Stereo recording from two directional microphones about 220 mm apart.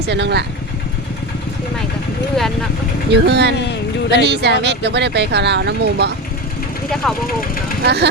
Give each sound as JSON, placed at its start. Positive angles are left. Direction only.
{"t": 0.1, "sound": "speech", "side_deg": -50}
{"t": 2.3, "sound": "speech", "side_deg": 0}
{"t": 3.1, "sound": "speech", "side_deg": -50}
{"t": 7.0, "sound": "speech", "side_deg": 5}
{"t": 7.9, "sound": "speech", "side_deg": -50}